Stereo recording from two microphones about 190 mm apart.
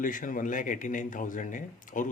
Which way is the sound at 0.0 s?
45° left (ahead or behind).